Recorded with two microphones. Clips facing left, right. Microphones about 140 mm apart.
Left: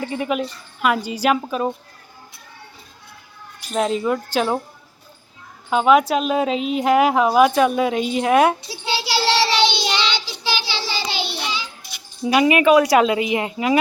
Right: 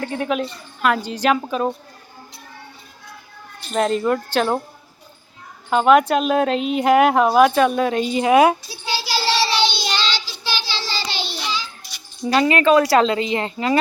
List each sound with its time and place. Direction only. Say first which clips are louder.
0.0 s a woman's voice: even; centre (ahead or behind)
3.6 s a woman's voice: right 1 dB; 5° left (ahead or behind)
5.7 s a woman's voice: right 1 dB; centre (ahead or behind)
9.1 s child singing: left 2 dB; 70° left (ahead or behind)
9.7 s child singing: left 2 dB; 20° left (ahead or behind)
12.2 s speech: left 1 dB; 10° left (ahead or behind)